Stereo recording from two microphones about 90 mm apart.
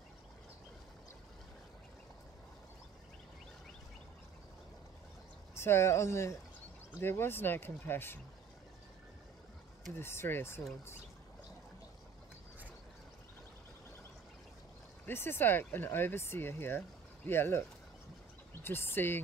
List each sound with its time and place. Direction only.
5.5 s speech: 30° left (ahead or behind)
9.9 s speech: 25° left (ahead or behind)
15.0 s speech: 25° left (ahead or behind)